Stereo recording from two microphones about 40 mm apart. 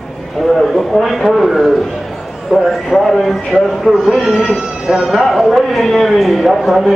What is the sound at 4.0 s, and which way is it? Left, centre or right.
Speech, centre.